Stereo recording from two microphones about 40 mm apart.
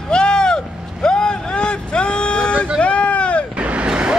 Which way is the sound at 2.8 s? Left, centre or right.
Left.